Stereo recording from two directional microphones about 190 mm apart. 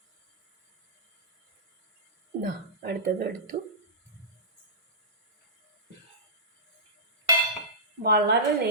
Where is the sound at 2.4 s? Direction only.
55° right (ahead or behind).